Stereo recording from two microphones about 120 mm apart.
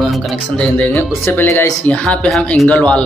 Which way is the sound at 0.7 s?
15° left (ahead or behind).